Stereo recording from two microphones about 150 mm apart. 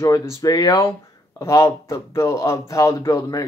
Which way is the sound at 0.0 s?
20° left (ahead or behind).